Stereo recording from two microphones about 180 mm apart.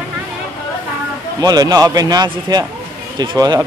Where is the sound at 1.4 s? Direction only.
20° right (ahead or behind).